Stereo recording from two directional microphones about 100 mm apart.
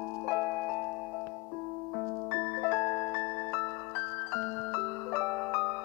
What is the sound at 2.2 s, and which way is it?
Music, 25° left (ahead or behind).